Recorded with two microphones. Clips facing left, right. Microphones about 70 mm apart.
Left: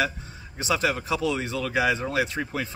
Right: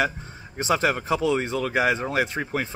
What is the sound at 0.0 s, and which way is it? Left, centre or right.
A man's voice, right.